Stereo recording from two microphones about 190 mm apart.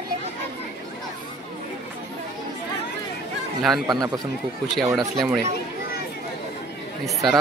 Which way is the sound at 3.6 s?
Centre (ahead or behind).